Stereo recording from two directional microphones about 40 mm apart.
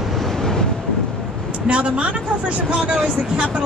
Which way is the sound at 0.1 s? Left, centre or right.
Centre.